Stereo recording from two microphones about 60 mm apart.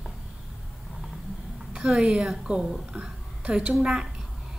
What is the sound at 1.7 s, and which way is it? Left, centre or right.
Speech, centre.